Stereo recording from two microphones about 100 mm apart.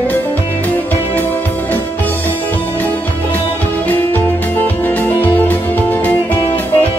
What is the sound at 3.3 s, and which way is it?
Music, 20° left (ahead or behind).